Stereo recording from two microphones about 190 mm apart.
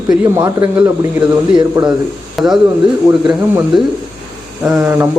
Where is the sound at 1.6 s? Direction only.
20° right (ahead or behind).